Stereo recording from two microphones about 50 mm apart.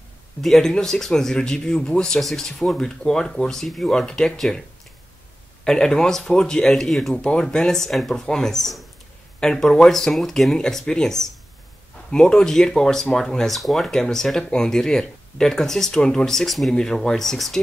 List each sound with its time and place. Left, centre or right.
0.4 s speech: centre
2.1 s speech: centre
7.2 s speech: centre
7.4 s speech: centre